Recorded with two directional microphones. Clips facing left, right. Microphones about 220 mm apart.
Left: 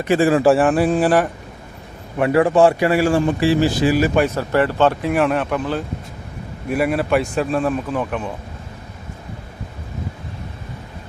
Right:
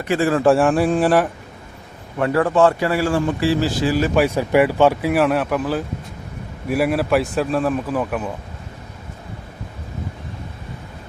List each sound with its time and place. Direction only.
0.1 s speech: 15° left (ahead or behind)
0.4 s speech: centre (ahead or behind)
2.1 s speech: 15° left (ahead or behind)
4.1 s speech: 10° right (ahead or behind)